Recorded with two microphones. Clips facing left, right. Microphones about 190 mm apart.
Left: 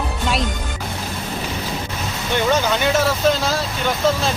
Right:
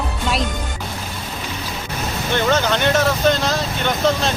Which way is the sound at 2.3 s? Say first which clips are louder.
Even; 10° left (ahead or behind).